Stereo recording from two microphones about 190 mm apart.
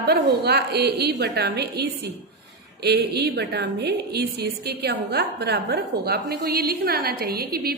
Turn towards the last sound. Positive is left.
turn(degrees=-55)  # may be behind; listen again after turning